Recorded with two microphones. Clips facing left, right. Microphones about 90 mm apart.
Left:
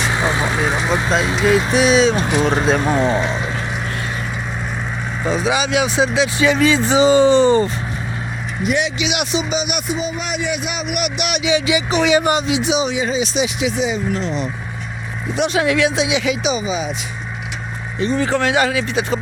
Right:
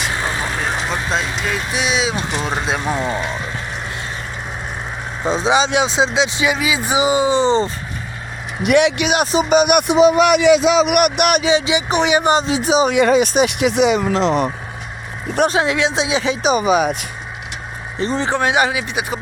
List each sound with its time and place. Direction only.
0.1 s vehicle: 20° left (ahead or behind)
1.4 s speech: 5° left (ahead or behind)
3.0 s speech: 25° left (ahead or behind)
5.2 s speech: 25° right (ahead or behind)
8.6 s speech: 65° right (ahead or behind)
9.1 s speech: 40° right (ahead or behind); by 11.0 s 85° right
11.0 s speech: 50° right (ahead or behind)
11.4 s speech: 30° right (ahead or behind)
12.9 s speech: 65° right (ahead or behind); by 14.4 s 85° right
15.5 s speech: 25° right (ahead or behind)
16.5 s speech: 60° right (ahead or behind)
18.2 s speech: 20° right (ahead or behind)